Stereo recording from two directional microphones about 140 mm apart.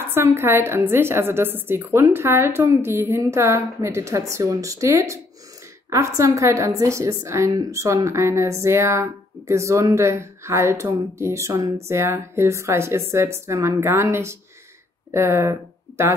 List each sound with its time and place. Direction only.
0.1 s a woman's voice: 15° right (ahead or behind)